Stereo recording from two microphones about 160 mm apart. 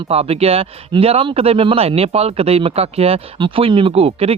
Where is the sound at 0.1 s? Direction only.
40° right (ahead or behind).